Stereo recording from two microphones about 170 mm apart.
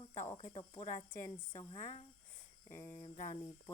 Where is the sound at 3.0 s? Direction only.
35° left (ahead or behind).